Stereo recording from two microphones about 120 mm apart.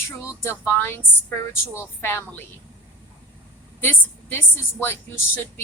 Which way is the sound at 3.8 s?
15° left (ahead or behind).